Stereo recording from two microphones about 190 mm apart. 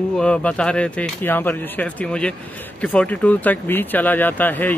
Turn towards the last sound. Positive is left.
turn(degrees=10)  # may be behind; listen again after turning